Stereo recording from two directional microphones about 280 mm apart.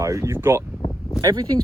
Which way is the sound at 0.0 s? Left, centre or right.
Centre.